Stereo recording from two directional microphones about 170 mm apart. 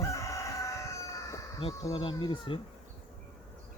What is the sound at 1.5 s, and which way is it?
Speech, 30° left (ahead or behind).